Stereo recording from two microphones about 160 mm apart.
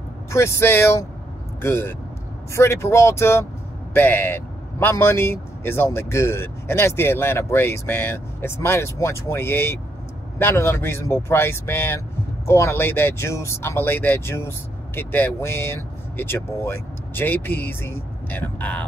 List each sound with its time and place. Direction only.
0.3 s speech: 15° left (ahead or behind)